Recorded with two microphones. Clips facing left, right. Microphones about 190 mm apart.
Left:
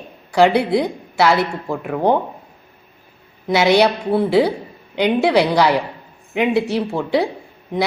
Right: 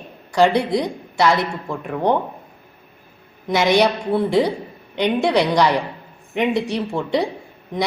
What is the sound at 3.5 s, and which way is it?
A woman's voice, 10° left (ahead or behind).